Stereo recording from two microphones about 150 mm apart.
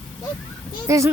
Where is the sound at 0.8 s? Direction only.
20° right (ahead or behind).